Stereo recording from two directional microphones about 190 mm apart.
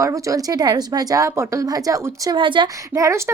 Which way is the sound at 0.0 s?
15° right (ahead or behind).